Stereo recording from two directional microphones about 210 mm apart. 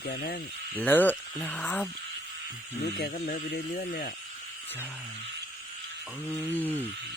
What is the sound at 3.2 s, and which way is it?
Speech, 30° left (ahead or behind).